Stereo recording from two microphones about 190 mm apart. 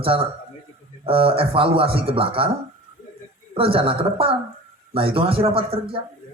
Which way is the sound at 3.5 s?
30° right (ahead or behind).